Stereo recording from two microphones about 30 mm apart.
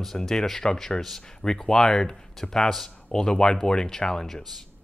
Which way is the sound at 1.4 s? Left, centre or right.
Centre.